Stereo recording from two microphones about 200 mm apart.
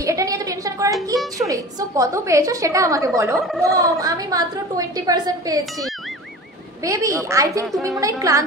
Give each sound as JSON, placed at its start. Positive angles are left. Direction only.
{"t": 0.0, "sound": "a sound", "side_deg": -15}
{"t": 1.1, "sound": "a sound", "side_deg": 0}
{"t": 1.5, "sound": "a woman's voice", "side_deg": -15}
{"t": 3.3, "sound": "speech", "side_deg": 0}
{"t": 3.6, "sound": "a woman's voice", "side_deg": -15}
{"t": 6.8, "sound": "a woman's voice", "side_deg": -15}